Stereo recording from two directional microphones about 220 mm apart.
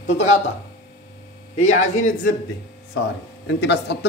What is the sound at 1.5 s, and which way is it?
Speech, 35° left (ahead or behind).